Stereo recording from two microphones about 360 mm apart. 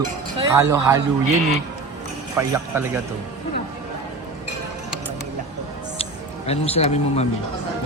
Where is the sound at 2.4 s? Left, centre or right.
Centre.